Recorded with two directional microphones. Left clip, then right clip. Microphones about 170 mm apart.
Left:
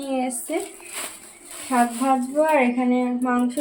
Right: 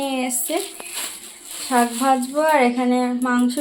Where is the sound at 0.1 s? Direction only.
20° right (ahead or behind).